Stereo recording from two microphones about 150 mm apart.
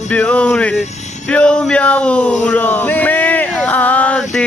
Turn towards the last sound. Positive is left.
turn(degrees=5)  # may be behind; listen again after turning